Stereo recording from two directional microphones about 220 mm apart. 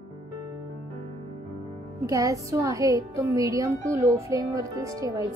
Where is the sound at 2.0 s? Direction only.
15° right (ahead or behind).